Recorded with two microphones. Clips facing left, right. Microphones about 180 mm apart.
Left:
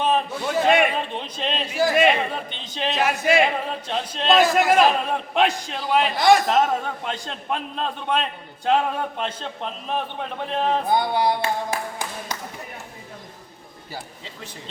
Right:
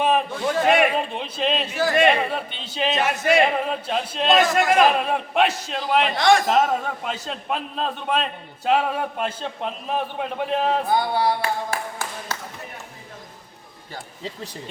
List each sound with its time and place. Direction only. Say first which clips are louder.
0.6 s a man's voice: even; 5° right (ahead or behind)
1.6 s a man's voice: left 2 dB; 10° left (ahead or behind); by 10.8 s 5° right (ahead or behind)
10.8 s speech: even; 20° left (ahead or behind)